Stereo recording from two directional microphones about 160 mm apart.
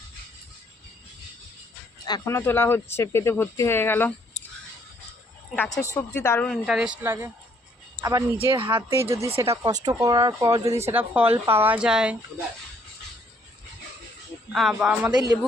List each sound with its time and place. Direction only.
2.0 s speech: 20° left (ahead or behind)
5.6 s speech: 20° left (ahead or behind)
6.5 s speech: 5° right (ahead or behind)
8.5 s speech: 30° right (ahead or behind)
8.9 s speech: 15° right (ahead or behind)
14.5 s speech: centre (ahead or behind)
15.1 s speech: 20° right (ahead or behind)